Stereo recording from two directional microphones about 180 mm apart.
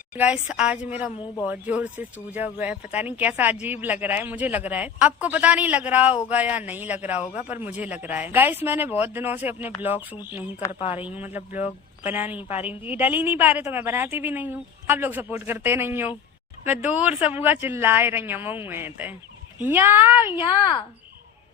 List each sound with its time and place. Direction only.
0.1 s a woman's voice: 10° right (ahead or behind)
10.8 s a man's voice: 30° left (ahead or behind)
11.0 s a woman's voice: 10° right (ahead or behind)